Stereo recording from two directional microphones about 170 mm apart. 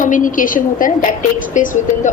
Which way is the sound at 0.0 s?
50° left (ahead or behind).